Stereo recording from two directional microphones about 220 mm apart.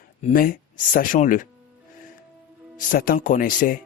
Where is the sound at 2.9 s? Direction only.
40° left (ahead or behind).